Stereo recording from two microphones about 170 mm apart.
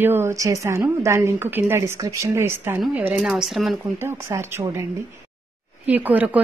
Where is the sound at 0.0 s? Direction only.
15° right (ahead or behind).